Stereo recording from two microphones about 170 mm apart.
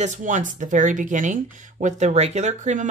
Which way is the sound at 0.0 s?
50° right (ahead or behind).